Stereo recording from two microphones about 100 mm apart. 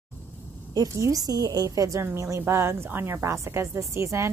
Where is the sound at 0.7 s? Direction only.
35° right (ahead or behind).